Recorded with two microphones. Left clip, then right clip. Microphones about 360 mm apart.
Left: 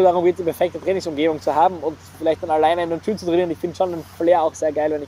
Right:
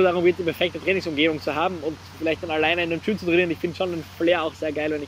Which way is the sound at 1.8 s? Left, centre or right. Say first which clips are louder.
Left 5 dB; left.